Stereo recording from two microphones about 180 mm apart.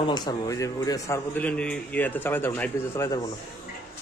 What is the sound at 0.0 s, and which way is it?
A man's voice, 25° left (ahead or behind).